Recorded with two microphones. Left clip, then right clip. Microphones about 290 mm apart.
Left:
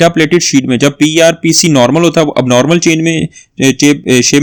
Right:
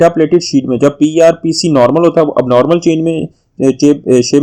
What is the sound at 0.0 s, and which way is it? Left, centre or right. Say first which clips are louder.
Speech: even; left.